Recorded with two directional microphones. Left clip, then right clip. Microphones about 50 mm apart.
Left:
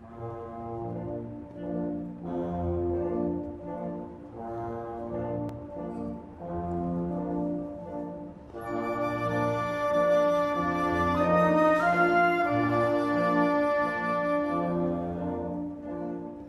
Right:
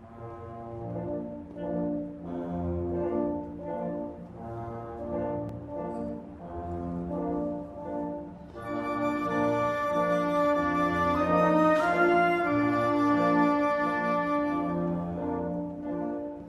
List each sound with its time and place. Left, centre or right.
1.6 s music: centre
2.2 s music: centre
3.0 s music: centre
8.6 s music: centre
12.4 s organ: centre
14.9 s brass instrument: centre